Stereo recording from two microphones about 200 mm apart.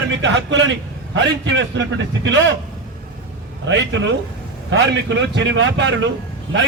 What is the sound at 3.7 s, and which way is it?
A man's voice, 65° right (ahead or behind).